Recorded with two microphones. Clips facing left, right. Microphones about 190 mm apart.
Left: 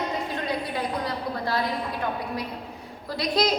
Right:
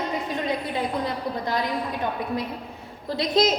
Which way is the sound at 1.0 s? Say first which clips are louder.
Right 1 dB; 20° right (ahead or behind).